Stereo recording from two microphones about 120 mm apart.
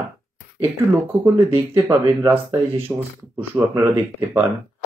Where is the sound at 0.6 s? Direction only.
20° right (ahead or behind).